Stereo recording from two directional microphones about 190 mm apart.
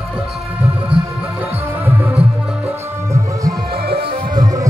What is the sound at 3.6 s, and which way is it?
Music, 55° right (ahead or behind).